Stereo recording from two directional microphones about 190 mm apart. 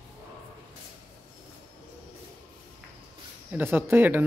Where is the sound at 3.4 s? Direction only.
10° right (ahead or behind).